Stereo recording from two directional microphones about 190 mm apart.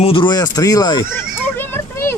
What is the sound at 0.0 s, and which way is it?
Children playing, 25° left (ahead or behind).